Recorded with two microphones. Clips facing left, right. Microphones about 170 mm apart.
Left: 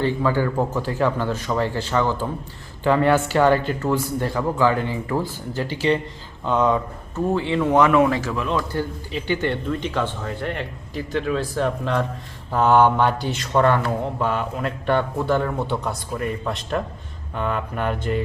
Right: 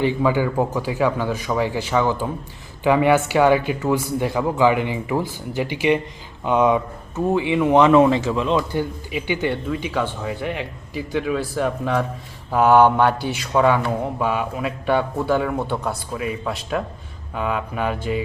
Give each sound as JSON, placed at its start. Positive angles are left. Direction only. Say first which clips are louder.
{"t": 0.0, "sound": "a man's voice", "louder": "right 2 dB", "side_deg": -15}